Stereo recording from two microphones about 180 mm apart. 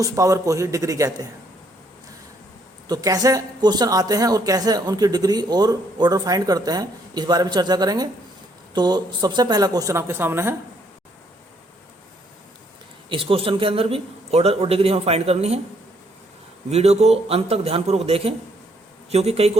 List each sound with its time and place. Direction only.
0.0 s a man's voice: 15° right (ahead or behind)
2.9 s speech: 20° right (ahead or behind)
13.1 s a man's voice: 30° right (ahead or behind)
16.6 s a man's voice: 35° right (ahead or behind)